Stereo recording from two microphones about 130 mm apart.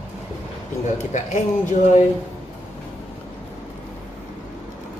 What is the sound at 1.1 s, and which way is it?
Speech, 70° left (ahead or behind).